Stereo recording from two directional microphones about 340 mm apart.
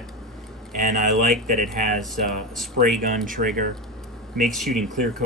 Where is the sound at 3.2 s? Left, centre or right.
Right.